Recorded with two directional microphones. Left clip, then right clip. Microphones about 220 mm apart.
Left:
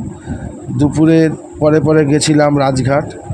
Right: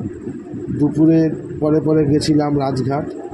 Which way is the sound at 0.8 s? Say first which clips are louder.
Left 4 dB; 90° left.